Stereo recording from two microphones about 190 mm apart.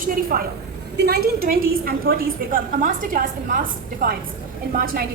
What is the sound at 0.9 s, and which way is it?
A woman's voice, 60° right (ahead or behind).